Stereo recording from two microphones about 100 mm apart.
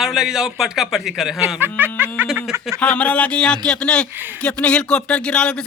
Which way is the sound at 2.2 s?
Centre (ahead or behind).